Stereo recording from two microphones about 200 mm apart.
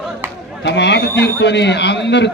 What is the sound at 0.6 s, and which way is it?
A man's voice, 60° left (ahead or behind).